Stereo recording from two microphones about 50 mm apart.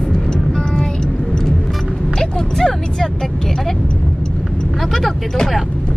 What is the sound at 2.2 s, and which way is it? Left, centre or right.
Vehicle, centre.